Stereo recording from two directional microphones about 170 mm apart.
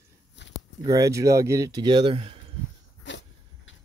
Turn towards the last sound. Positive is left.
turn(degrees=90)